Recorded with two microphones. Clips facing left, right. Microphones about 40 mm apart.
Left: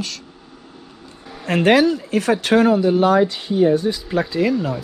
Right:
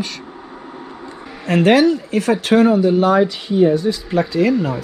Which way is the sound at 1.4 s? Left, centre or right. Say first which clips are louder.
Right 2 dB; left.